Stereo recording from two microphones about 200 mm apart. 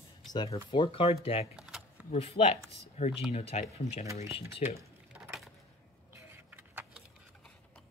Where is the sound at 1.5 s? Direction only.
5° right (ahead or behind).